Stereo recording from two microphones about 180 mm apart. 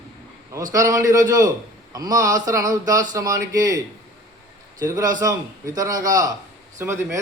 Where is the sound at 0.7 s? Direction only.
20° right (ahead or behind).